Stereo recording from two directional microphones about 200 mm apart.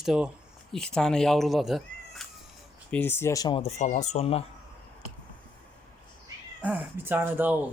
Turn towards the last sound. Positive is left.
turn(degrees=-10)  # may be behind; listen again after turning